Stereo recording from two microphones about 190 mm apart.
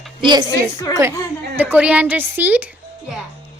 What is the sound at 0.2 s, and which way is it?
Speech, 25° right (ahead or behind).